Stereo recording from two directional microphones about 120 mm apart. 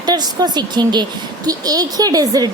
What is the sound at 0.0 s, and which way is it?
A woman's voice, 35° right (ahead or behind).